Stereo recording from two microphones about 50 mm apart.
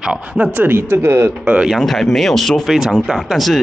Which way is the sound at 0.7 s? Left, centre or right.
Right.